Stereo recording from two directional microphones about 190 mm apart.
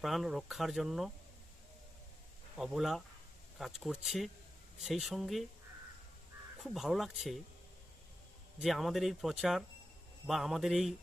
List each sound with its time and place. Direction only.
0.0 s speech: centre (ahead or behind)
2.6 s speech: centre (ahead or behind)
6.6 s speech: centre (ahead or behind)
8.5 s speech: centre (ahead or behind)